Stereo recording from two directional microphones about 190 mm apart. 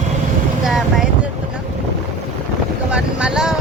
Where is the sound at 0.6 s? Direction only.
Centre (ahead or behind).